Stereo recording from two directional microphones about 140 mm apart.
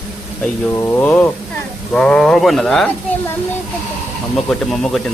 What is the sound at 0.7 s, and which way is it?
Speech, 15° left (ahead or behind).